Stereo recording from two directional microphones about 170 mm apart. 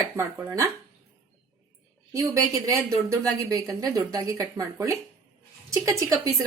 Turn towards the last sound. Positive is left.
turn(degrees=-20)  # may be behind; listen again after turning